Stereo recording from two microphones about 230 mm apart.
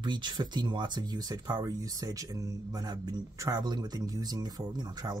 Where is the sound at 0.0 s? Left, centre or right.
Centre.